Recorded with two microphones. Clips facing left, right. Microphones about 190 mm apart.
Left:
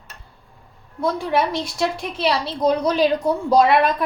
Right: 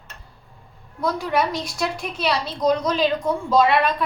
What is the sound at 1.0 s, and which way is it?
A woman's voice, 30° left (ahead or behind).